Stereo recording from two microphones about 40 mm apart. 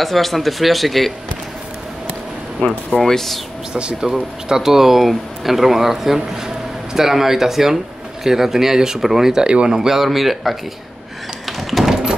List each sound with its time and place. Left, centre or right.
0.0 s speech: centre
2.9 s speech: centre
3.7 s speech: right
4.1 s speech: centre
9.5 s speech: right
9.8 s speech: centre
11.4 s a sound: centre